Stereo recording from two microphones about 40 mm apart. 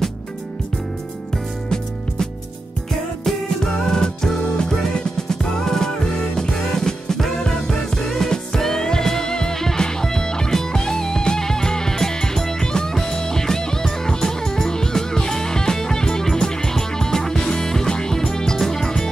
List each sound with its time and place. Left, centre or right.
3.3 s music: centre